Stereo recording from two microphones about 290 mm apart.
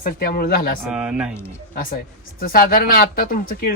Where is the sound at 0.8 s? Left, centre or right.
Centre.